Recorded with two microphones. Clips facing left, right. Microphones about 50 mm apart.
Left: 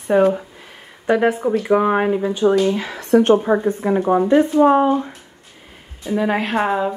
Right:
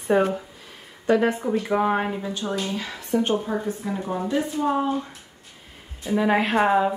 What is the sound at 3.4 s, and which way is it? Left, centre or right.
Speech, left.